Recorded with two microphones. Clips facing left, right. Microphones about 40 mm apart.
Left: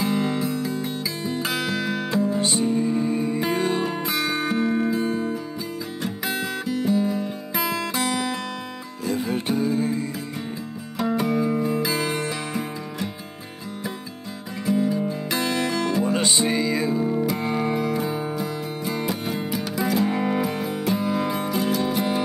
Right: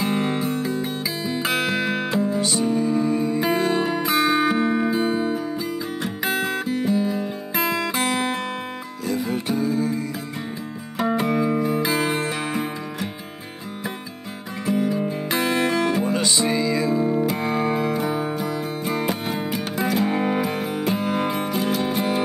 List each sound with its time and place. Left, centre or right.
0.0 s music: right
2.7 s music: centre
3.3 s music: right
9.3 s music: left
11.0 s music: right
14.7 s music: right
16.1 s music: left
17.0 s music: centre
17.5 s music: right